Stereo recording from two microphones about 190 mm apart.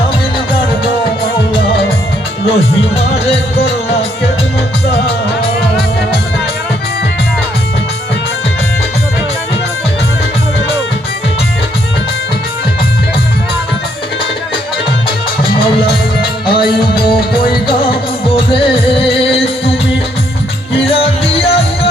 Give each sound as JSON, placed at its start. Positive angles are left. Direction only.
{"t": 2.5, "sound": "music", "side_deg": 30}
{"t": 16.5, "sound": "music", "side_deg": 25}
{"t": 20.7, "sound": "music", "side_deg": 30}